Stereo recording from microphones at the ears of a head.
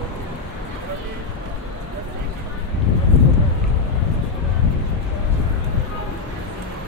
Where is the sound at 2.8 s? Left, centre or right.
Left.